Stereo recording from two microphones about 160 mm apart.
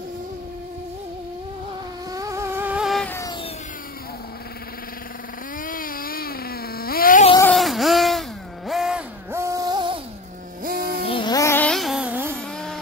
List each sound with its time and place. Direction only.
2.1 s vehicle: 20° right (ahead or behind); by 3.1 s centre (ahead or behind)
3.1 s a sound: 20° left (ahead or behind)
5.6 s cat: 60° left (ahead or behind)
7.4 s wail: centre (ahead or behind)
9.3 s a sound: 20° right (ahead or behind)
10.6 s music: 65° right (ahead or behind)
11.1 s music: 30° left (ahead or behind); by 12.4 s 10° right (ahead or behind)
12.4 s music: 5° left (ahead or behind)